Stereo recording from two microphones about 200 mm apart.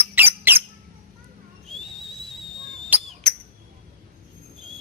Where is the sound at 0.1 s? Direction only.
10° right (ahead or behind).